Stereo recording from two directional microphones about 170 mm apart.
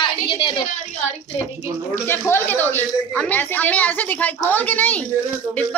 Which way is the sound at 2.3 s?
10° left (ahead or behind).